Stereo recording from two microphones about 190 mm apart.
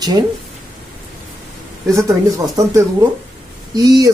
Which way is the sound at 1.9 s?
15° right (ahead or behind).